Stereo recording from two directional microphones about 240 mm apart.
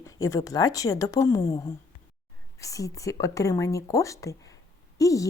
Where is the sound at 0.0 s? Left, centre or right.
Centre.